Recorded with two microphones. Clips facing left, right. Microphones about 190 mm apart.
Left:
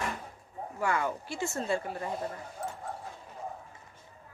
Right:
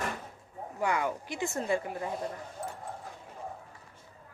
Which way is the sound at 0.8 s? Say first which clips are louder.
Even; 15° right (ahead or behind).